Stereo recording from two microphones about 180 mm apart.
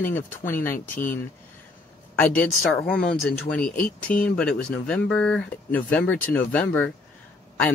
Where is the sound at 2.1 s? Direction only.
10° left (ahead or behind).